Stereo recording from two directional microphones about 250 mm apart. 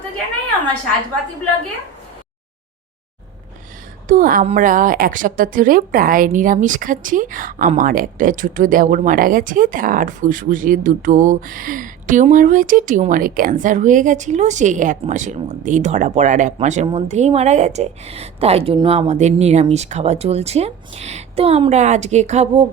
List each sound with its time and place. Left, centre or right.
4.1 s a woman's voice: right